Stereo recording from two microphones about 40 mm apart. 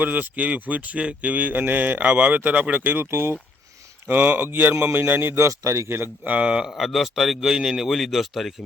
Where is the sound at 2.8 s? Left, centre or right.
Right.